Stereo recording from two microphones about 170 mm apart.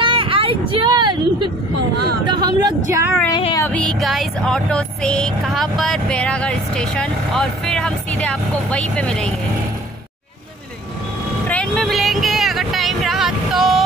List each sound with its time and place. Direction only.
0.0 s speech: 30° right (ahead or behind); by 3.2 s 15° right (ahead or behind)
3.3 s child singing: 25° left (ahead or behind)
3.6 s music: 5° left (ahead or behind)
11.4 s vehicle: 5° left (ahead or behind)